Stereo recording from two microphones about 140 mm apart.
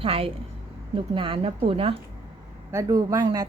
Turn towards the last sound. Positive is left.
turn(degrees=-25)  # may be behind; listen again after turning